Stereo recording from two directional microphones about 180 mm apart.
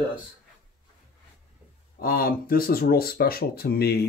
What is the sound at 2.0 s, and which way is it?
Speech, 55° left (ahead or behind).